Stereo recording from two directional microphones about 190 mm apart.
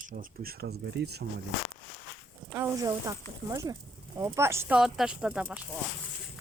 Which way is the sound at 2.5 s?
15° right (ahead or behind).